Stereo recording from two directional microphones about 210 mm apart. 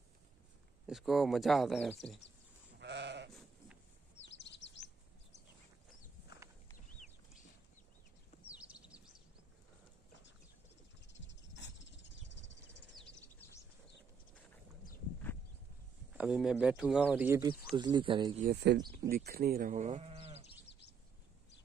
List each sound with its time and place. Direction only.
0.8 s speech: centre (ahead or behind)
2.8 s sheep: 55° right (ahead or behind)
4.2 s chirp: 60° left (ahead or behind)
8.5 s a sound: 5° right (ahead or behind)
11.1 s a sound: 60° left (ahead or behind)
12.9 s a sound: 5° left (ahead or behind)
16.2 s speech: 5° right (ahead or behind)
17.7 s speech: 20° right (ahead or behind)
18.4 s speech: 50° right (ahead or behind); by 20.4 s 30° right (ahead or behind)